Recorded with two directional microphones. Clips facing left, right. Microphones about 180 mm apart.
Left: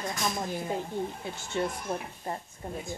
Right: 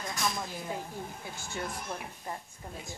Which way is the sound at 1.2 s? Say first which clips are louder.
Left 7 dB; 25° left (ahead or behind).